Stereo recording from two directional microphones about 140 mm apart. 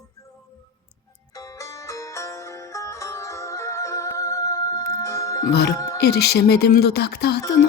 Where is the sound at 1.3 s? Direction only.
25° left (ahead or behind).